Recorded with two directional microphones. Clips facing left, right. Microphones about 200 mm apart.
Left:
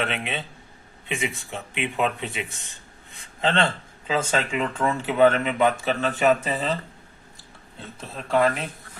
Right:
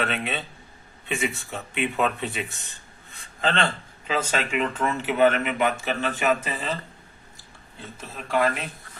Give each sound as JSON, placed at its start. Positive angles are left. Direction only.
{"t": 0.0, "sound": "speech", "side_deg": 15}
{"t": 8.3, "sound": "speech", "side_deg": -5}